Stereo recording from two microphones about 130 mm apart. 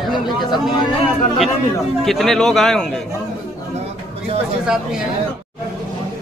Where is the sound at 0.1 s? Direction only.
Centre (ahead or behind).